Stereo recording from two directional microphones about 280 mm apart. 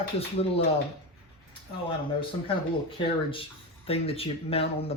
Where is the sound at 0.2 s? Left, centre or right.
Left.